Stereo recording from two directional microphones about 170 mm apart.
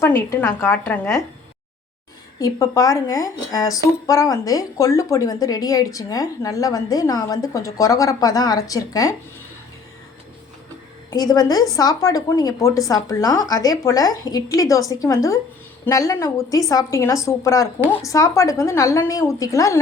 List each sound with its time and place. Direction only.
0.0 s a woman's voice: 15° left (ahead or behind)
2.4 s speech: 20° left (ahead or behind)
11.1 s speech: 25° left (ahead or behind)